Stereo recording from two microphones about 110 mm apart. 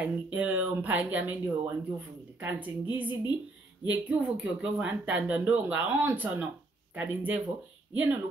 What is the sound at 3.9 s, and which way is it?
Speech, 15° right (ahead or behind).